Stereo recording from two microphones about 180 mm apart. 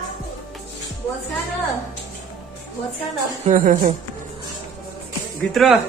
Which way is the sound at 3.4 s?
45° right (ahead or behind).